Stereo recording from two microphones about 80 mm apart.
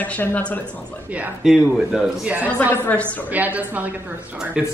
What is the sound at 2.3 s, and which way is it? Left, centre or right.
A woman's voice, right.